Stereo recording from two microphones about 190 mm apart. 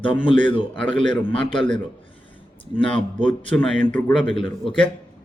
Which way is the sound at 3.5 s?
5° left (ahead or behind).